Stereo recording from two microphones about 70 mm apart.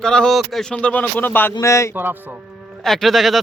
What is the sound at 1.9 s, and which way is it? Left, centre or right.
Speech, right.